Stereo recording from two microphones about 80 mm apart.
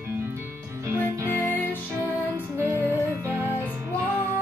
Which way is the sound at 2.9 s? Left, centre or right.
Right.